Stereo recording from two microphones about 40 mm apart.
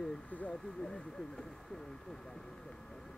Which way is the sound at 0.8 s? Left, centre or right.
Centre.